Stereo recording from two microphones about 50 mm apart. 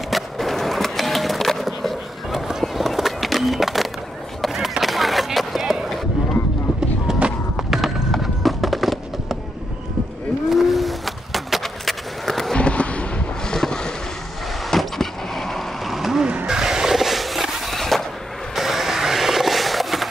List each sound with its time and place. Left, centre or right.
0.1 s skateboard: centre
7.1 s a sound: centre
10.5 s skateboard: centre
12.5 s a sound: left
13.7 s vehicle: centre
14.6 s vehicle: centre
15.9 s vehicle: centre
16.4 s skateboard: centre